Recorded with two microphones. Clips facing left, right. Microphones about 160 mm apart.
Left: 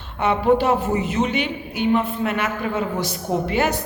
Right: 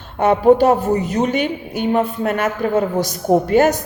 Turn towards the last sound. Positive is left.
turn(degrees=-45)  # may be behind; listen again after turning